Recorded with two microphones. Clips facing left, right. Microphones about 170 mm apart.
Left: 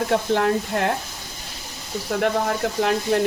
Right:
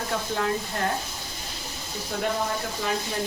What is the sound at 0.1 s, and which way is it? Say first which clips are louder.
Speech: left 6 dB; 65° left (ahead or behind).